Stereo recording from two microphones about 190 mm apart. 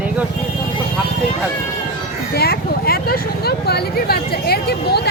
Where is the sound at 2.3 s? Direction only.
55° left (ahead or behind).